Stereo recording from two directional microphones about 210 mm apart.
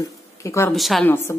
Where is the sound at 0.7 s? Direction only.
Centre (ahead or behind).